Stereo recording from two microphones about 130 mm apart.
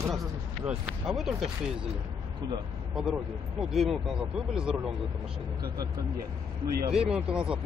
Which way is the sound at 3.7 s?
Centre (ahead or behind).